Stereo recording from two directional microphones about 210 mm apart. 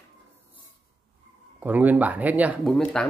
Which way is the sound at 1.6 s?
10° right (ahead or behind).